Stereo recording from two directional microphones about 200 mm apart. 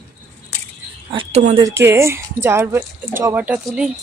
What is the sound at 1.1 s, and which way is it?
Speech, 30° right (ahead or behind).